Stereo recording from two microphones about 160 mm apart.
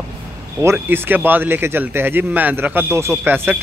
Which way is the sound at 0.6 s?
15° right (ahead or behind).